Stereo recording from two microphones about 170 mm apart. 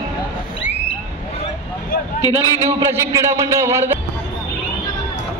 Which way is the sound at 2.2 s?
20° left (ahead or behind).